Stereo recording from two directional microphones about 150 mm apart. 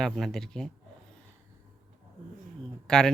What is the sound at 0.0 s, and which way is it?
Speech, 5° left (ahead or behind).